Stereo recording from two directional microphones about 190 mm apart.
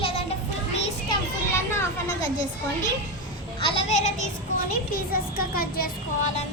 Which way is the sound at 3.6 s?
35° left (ahead or behind).